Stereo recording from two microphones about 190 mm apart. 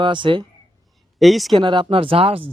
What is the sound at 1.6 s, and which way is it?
Speech, 25° right (ahead or behind).